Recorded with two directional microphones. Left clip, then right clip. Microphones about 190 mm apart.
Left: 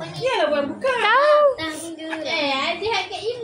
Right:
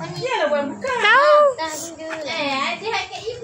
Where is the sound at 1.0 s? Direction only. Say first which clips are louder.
Right 3 dB; centre (ahead or behind).